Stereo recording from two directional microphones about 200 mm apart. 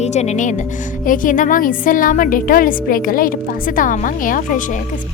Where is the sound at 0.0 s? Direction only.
35° left (ahead or behind).